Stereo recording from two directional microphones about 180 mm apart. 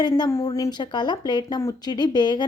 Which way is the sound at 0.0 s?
20° left (ahead or behind).